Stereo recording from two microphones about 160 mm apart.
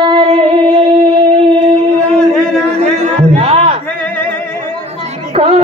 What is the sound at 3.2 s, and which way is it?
Music, 40° right (ahead or behind).